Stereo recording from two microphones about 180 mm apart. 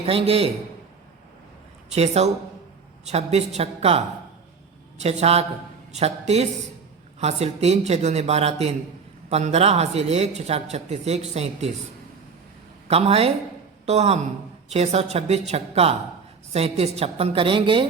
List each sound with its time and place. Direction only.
0.0 s speech: 30° right (ahead or behind)
2.0 s speech: 35° right (ahead or behind)
12.9 s speech: 35° right (ahead or behind)